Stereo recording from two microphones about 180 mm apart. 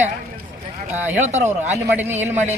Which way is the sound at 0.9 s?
10° right (ahead or behind).